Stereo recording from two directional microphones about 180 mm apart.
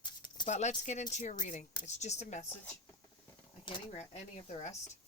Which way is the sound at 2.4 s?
10° left (ahead or behind).